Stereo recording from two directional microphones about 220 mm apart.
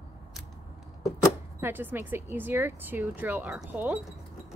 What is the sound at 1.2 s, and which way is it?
Speech, 10° right (ahead or behind).